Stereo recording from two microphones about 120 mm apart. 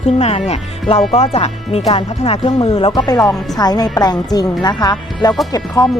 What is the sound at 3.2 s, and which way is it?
Speech, 5° left (ahead or behind).